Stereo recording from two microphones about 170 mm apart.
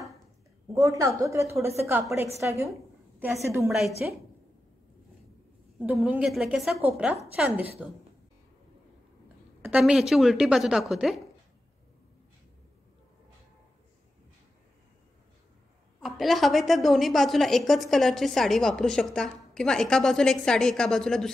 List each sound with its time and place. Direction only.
0.7 s a woman's voice: 20° right (ahead or behind)
4.0 s a woman's voice: 5° right (ahead or behind)
5.9 s a woman's voice: 10° right (ahead or behind)
9.6 s a woman's voice: 10° right (ahead or behind)
16.0 s a woman's voice: centre (ahead or behind)